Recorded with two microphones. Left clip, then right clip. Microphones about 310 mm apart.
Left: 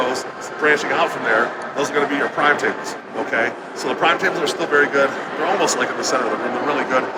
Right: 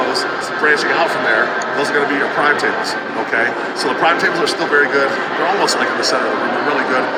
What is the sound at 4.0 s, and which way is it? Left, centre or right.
A man's voice, centre.